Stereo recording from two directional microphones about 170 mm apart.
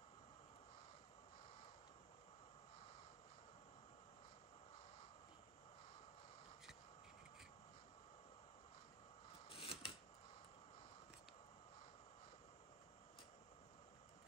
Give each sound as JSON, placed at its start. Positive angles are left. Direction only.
{"t": 9.5, "sound": "scissors", "side_deg": 35}